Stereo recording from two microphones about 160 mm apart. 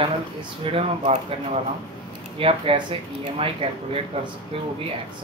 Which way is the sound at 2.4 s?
35° right (ahead or behind).